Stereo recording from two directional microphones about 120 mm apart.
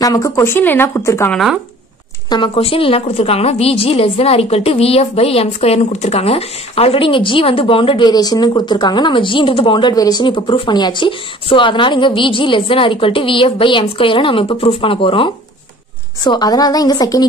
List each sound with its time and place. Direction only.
0.0 s speech: 30° left (ahead or behind)
1.3 s speech: centre (ahead or behind)
2.2 s a woman's voice: 40° left (ahead or behind)
8.1 s speech: 35° left (ahead or behind)
9.9 s a woman's voice: 35° left (ahead or behind)
16.3 s speech: 35° left (ahead or behind)